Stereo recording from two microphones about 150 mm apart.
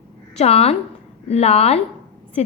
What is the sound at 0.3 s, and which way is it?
A woman's voice, 40° left (ahead or behind).